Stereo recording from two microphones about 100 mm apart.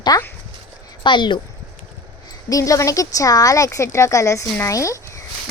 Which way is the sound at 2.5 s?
35° left (ahead or behind).